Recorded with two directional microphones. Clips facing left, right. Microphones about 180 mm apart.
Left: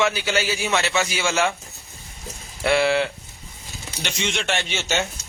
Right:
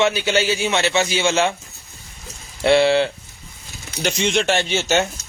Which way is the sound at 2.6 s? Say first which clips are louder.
Right 5 dB; 30° right (ahead or behind).